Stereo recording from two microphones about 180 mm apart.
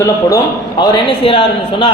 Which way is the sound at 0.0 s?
20° left (ahead or behind).